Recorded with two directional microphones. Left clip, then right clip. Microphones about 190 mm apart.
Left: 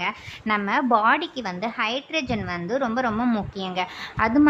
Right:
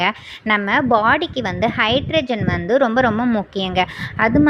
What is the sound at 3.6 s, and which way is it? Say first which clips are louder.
Speech: right 8 dB; 25° right (ahead or behind).